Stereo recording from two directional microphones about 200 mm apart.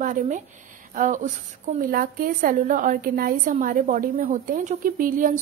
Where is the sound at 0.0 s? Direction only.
40° right (ahead or behind).